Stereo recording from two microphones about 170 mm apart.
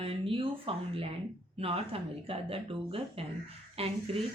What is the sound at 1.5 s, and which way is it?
A woman's voice, 35° right (ahead or behind).